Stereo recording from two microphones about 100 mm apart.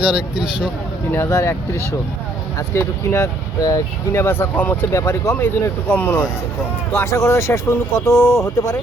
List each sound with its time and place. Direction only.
0.0 s speech: 10° right (ahead or behind)
1.1 s speech: 25° left (ahead or behind)
6.9 s speech: 30° left (ahead or behind)